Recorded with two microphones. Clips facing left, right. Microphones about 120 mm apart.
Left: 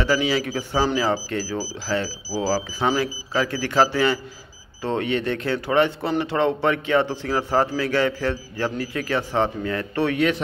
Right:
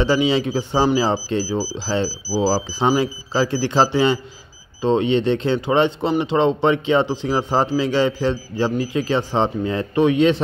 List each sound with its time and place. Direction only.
0.0 s speech: 25° right (ahead or behind)